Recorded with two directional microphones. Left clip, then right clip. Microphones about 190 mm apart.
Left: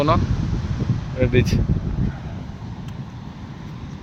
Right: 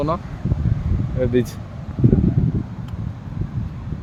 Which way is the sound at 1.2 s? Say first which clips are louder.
Even; 20° right (ahead or behind).